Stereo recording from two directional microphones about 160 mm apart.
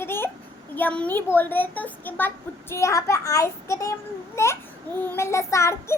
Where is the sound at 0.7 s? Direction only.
10° left (ahead or behind).